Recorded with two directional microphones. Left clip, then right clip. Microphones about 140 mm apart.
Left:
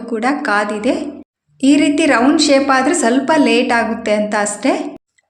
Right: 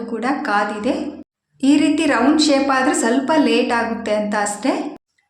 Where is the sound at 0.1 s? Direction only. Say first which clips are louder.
Left 4 dB; 30° left (ahead or behind).